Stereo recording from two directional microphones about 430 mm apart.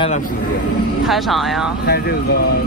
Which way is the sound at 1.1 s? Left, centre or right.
Centre.